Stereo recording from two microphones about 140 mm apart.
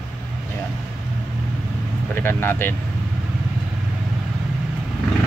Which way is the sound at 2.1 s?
15° left (ahead or behind).